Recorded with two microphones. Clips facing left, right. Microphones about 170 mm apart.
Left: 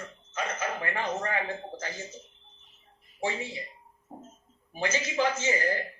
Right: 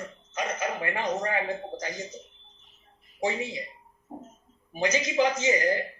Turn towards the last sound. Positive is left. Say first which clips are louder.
# right 4 dB
turn(degrees=-15)  # may be behind; listen again after turning